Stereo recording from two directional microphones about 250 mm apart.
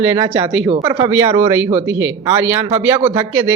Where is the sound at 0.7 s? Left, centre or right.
Centre.